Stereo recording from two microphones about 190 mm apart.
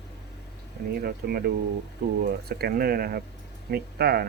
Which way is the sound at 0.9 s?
55° right (ahead or behind).